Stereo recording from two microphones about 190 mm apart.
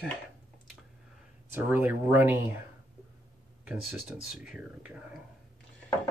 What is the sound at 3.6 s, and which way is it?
Speech, 5° right (ahead or behind).